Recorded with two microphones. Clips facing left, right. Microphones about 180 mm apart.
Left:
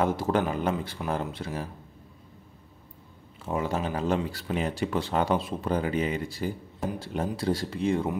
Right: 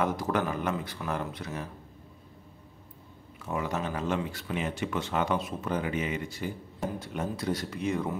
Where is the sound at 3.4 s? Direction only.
30° left (ahead or behind).